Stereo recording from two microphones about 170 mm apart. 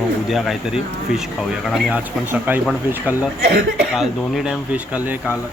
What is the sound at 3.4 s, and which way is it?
Speech, 70° right (ahead or behind).